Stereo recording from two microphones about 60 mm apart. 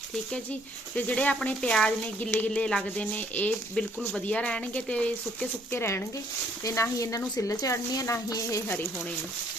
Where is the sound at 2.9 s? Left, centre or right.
Left.